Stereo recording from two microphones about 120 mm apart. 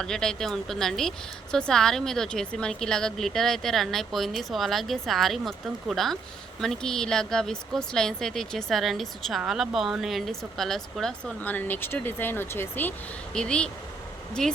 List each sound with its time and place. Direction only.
0.0 s a woman's voice: 5° left (ahead or behind)
11.3 s a woman's voice: 15° left (ahead or behind)